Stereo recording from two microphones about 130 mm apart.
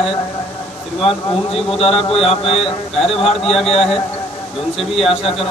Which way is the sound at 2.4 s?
45° left (ahead or behind).